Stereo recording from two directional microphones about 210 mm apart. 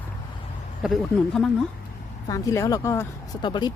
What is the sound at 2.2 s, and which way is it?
Speech, 15° left (ahead or behind).